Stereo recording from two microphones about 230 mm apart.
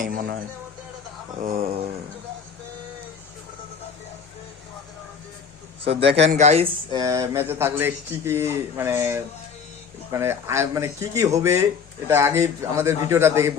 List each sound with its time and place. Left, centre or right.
0.0 s speech: right
5.8 s speech: right
7.0 s speech: centre